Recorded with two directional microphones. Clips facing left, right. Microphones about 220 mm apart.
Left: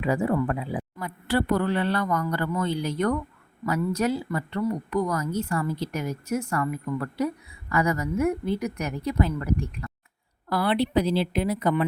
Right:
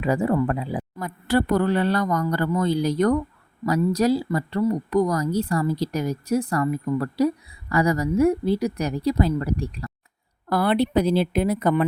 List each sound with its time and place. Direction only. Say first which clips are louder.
0.0 s speech: right 3 dB; 40° right (ahead or behind)
10.5 s speech: right 3 dB; 45° right (ahead or behind)